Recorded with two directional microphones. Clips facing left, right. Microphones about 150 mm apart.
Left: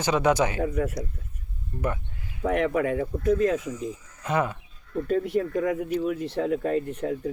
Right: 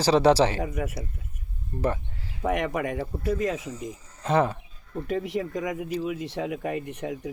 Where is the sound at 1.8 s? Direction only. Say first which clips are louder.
Right 2 dB; 30° right (ahead or behind).